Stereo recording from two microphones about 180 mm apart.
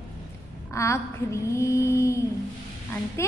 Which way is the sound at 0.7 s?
15° left (ahead or behind).